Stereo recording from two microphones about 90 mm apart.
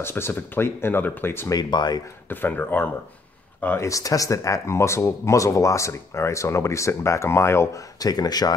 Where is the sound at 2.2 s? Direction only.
25° left (ahead or behind).